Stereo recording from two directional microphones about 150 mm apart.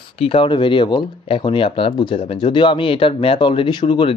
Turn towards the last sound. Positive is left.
turn(degrees=35)  # may be behind; listen again after turning